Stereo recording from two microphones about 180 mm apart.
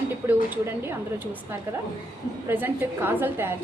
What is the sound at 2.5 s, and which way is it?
A woman's voice, 10° right (ahead or behind).